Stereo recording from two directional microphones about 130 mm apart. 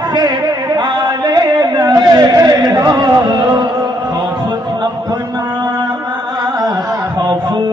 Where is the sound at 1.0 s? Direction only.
35° right (ahead or behind).